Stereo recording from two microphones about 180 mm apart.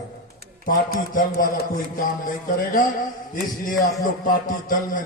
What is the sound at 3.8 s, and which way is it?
Speech, 50° left (ahead or behind).